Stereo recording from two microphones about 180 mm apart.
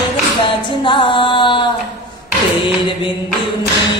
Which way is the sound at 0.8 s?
25° left (ahead or behind).